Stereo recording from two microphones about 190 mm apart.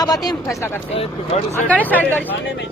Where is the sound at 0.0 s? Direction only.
20° left (ahead or behind).